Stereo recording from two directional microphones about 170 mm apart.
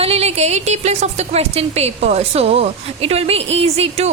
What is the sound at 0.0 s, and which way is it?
A woman's voice, 35° right (ahead or behind).